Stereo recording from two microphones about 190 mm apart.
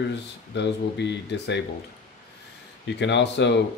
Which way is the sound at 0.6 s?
65° left (ahead or behind).